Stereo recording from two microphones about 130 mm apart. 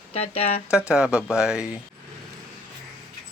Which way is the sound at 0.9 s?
10° right (ahead or behind).